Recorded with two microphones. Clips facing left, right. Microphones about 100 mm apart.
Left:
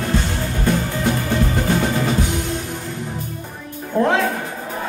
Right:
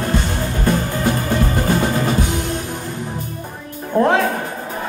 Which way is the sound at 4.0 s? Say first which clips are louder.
Right 2 dB; 50° right (ahead or behind).